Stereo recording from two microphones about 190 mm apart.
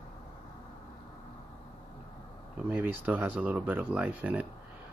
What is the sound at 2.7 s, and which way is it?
Speech, 10° right (ahead or behind).